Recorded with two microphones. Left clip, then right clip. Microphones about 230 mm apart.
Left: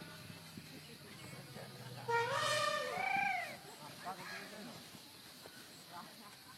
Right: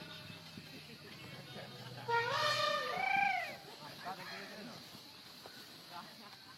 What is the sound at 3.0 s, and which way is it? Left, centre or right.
Cat, right.